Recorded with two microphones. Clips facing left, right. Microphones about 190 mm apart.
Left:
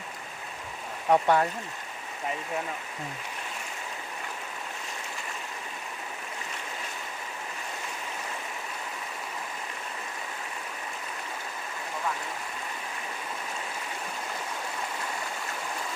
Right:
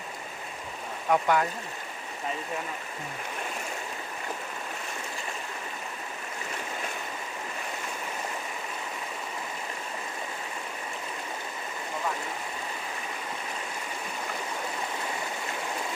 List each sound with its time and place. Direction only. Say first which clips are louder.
1.1 s speech: left 2 dB; 30° left (ahead or behind)